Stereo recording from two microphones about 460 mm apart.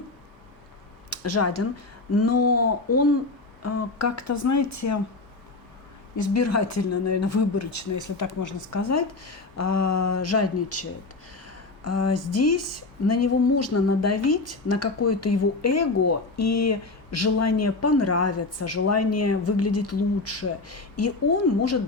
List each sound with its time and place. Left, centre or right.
1.2 s a woman's voice: left
6.1 s a woman's voice: left